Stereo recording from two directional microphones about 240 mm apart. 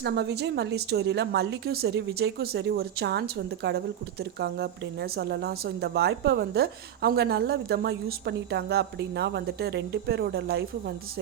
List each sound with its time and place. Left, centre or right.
0.0 s a woman's voice: right